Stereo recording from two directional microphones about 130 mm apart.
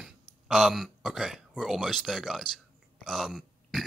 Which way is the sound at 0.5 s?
Centre (ahead or behind).